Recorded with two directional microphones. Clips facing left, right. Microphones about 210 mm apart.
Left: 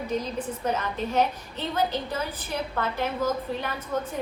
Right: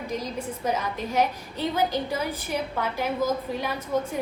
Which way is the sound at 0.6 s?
10° right (ahead or behind).